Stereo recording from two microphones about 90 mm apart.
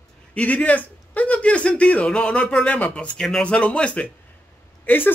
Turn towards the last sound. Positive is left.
turn(degrees=20)  # may be behind; listen again after turning